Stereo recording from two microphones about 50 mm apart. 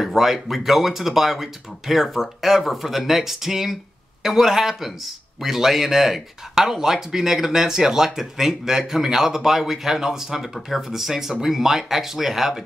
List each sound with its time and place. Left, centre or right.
0.0 s a man's voice: centre